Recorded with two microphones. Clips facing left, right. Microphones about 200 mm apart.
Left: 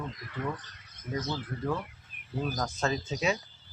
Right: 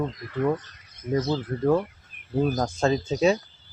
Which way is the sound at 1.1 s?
30° right (ahead or behind).